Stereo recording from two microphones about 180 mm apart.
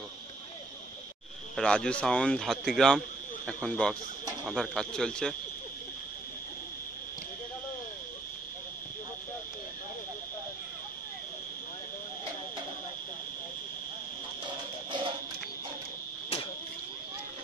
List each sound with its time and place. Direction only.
1.6 s speech: 5° left (ahead or behind)
14.9 s music: 25° right (ahead or behind)